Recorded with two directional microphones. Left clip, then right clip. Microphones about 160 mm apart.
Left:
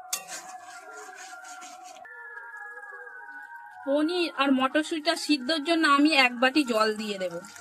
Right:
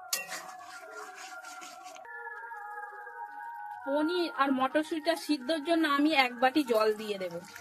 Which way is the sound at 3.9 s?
50° left (ahead or behind).